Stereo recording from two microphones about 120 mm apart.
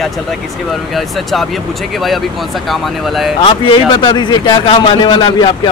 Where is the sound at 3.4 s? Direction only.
40° left (ahead or behind).